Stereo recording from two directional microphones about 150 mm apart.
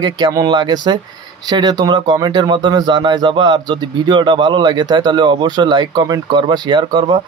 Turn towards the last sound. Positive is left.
turn(degrees=-30)  # may be behind; listen again after turning